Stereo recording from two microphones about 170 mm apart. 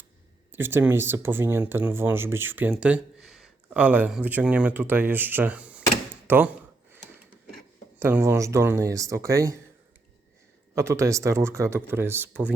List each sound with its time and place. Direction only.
0.5 s speech: 15° right (ahead or behind)
7.9 s speech: 15° right (ahead or behind)
10.8 s speech: 15° right (ahead or behind)